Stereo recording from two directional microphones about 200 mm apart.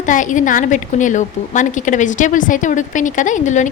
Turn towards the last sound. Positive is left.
turn(degrees=40)  # may be behind; listen again after turning